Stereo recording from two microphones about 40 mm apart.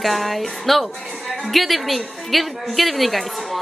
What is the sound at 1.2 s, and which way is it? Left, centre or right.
Music, centre.